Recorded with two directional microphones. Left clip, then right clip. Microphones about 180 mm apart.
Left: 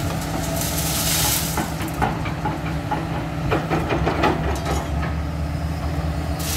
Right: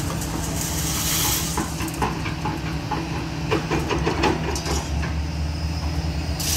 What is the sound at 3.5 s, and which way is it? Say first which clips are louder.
Train: left 1 dB; 40° left (ahead or behind).